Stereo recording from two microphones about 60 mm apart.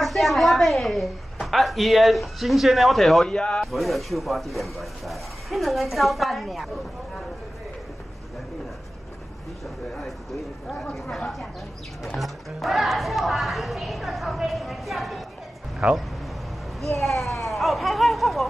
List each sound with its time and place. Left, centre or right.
0.0 s a woman's voice: centre
3.3 s speech: centre
3.6 s speech: centre
10.7 s speech: centre
15.8 s speech: right
16.8 s speech: centre